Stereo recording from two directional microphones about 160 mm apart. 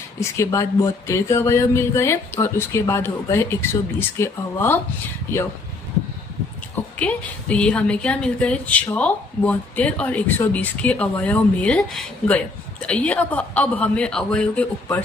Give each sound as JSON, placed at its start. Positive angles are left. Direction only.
{"t": 0.2, "sound": "a woman's voice", "side_deg": 15}
{"t": 7.0, "sound": "a woman's voice", "side_deg": 10}